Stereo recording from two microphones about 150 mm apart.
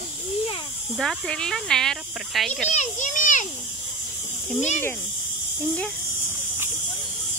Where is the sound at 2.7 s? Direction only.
55° left (ahead or behind).